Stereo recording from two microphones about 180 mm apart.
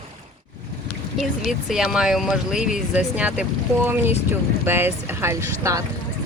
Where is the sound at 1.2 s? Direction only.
Centre (ahead or behind); by 5.9 s 15° right (ahead or behind).